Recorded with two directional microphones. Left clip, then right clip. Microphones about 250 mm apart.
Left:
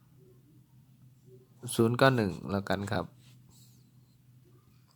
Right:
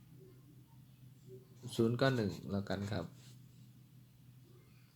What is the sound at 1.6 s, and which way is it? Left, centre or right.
Speech, left.